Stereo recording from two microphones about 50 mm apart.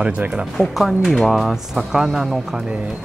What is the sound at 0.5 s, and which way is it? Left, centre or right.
Speech, centre.